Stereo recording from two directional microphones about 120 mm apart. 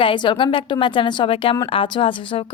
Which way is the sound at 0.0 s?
45° left (ahead or behind).